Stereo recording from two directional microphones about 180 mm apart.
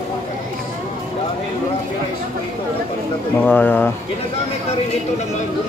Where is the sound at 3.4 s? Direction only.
10° left (ahead or behind).